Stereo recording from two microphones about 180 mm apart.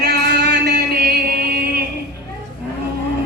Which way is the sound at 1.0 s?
55° right (ahead or behind).